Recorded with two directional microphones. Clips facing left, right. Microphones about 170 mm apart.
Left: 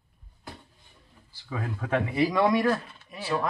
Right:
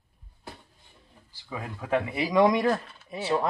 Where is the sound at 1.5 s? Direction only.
10° right (ahead or behind).